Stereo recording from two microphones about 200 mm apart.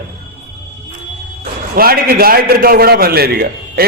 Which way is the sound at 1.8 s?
50° right (ahead or behind).